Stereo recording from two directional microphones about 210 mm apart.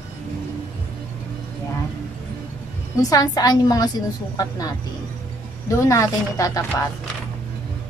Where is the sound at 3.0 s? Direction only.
15° left (ahead or behind).